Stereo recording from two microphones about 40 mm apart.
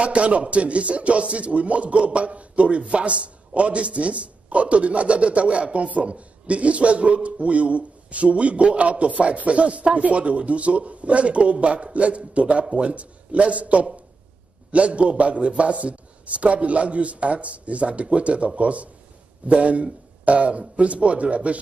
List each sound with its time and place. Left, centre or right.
0.0 s speech: right